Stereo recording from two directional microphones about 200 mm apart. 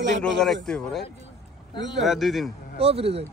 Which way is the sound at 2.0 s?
Centre (ahead or behind).